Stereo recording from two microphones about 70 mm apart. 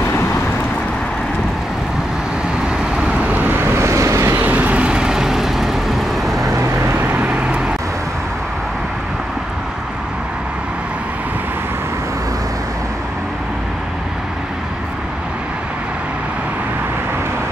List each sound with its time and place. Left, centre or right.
3.0 s vehicle: centre
3.7 s vehicle: right
4.4 s vehicle: right; by 6.4 s centre
6.4 s vehicle: right
7.2 s vehicle: centre